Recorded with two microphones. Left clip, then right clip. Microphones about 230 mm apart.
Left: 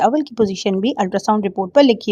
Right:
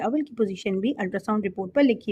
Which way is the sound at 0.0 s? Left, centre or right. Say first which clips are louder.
Left 10 dB; left.